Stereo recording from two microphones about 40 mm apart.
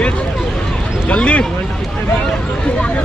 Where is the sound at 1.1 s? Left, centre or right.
Left.